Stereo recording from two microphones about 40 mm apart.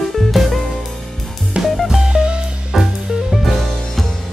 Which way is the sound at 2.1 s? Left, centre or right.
Right.